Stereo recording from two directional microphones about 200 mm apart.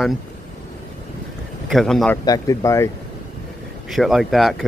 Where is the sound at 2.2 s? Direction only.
15° left (ahead or behind).